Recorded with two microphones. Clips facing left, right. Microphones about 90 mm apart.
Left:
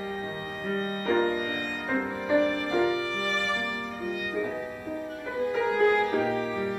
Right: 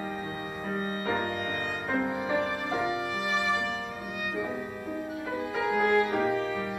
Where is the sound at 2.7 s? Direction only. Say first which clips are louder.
Left 4 dB; 15° right (ahead or behind).